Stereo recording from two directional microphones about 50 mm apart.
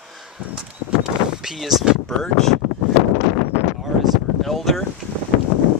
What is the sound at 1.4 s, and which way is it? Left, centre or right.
Speech, centre.